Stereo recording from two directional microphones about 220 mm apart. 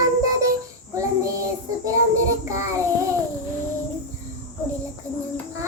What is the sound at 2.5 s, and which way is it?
Child singing, 15° right (ahead or behind).